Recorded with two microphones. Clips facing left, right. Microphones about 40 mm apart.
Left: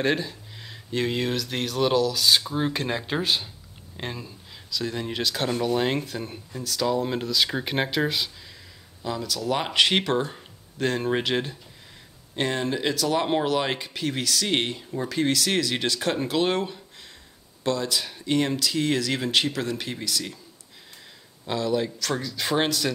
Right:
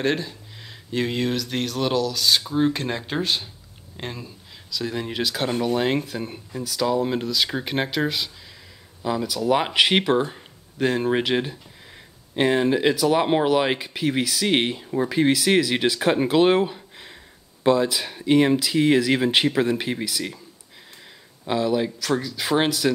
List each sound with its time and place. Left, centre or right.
0.0 s speech: centre
9.0 s speech: centre
21.5 s speech: centre